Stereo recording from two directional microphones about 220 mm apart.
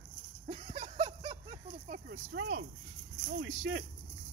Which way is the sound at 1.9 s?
50° right (ahead or behind).